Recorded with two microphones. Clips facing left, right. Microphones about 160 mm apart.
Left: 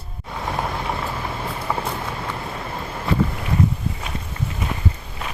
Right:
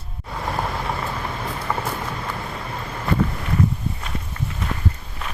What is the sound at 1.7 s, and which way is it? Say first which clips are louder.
Run: left 1 dB; 10° left (ahead or behind).